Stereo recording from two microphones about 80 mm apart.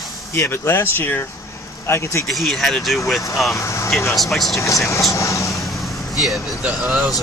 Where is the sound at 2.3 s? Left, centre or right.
Centre.